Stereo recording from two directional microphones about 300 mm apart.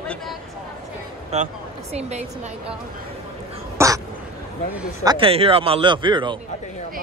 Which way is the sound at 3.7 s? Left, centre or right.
Centre.